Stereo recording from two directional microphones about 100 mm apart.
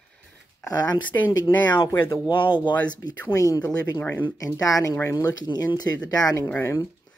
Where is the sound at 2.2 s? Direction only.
55° left (ahead or behind); by 4.0 s 40° left (ahead or behind).